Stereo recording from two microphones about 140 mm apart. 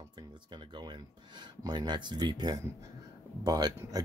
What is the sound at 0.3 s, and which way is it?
Speech, 30° right (ahead or behind).